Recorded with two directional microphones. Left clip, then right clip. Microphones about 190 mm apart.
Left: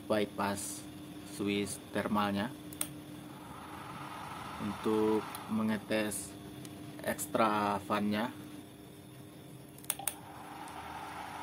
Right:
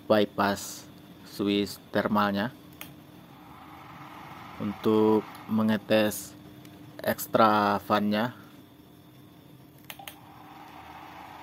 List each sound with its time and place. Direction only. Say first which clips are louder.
0.1 s speech: right 9 dB; 35° right (ahead or behind)
4.8 s speech: right 8 dB; 35° right (ahead or behind)